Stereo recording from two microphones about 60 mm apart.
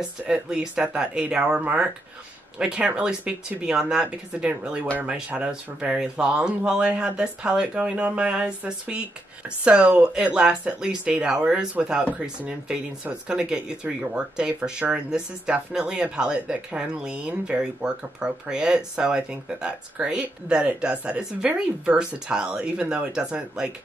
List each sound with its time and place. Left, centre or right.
0.3 s speech: centre
2.6 s speech: centre
12.0 s speech: right
12.4 s speech: centre